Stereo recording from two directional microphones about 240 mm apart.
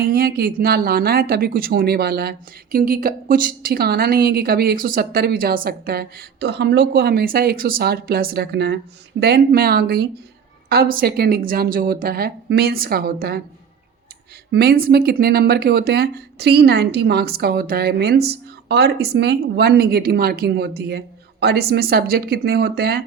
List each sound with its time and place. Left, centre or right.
0.0 s speech: right
14.5 s speech: right